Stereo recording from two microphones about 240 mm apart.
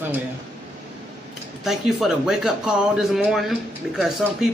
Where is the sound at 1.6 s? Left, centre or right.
Centre.